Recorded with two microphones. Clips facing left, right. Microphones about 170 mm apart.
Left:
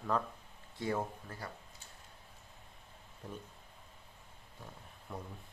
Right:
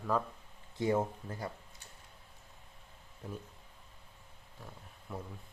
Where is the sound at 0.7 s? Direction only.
20° right (ahead or behind).